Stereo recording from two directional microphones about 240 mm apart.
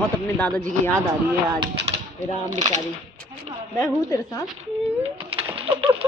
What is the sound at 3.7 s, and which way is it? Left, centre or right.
Speech, centre.